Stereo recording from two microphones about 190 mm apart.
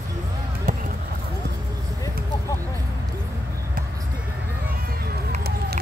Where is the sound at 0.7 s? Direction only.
40° right (ahead or behind).